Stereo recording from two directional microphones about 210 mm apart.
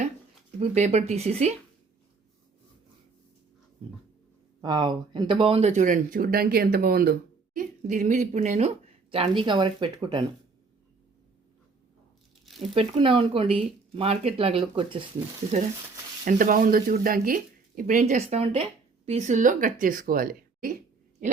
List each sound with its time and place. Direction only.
0.6 s speech: 30° right (ahead or behind)
4.6 s speech: 20° right (ahead or behind)
12.7 s speech: 25° right (ahead or behind)
16.2 s speech: 40° right (ahead or behind)